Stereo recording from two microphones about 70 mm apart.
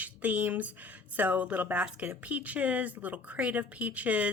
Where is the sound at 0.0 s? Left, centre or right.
Right.